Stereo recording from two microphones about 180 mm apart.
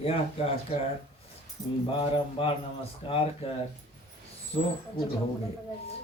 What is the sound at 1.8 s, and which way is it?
Mantra, 30° left (ahead or behind).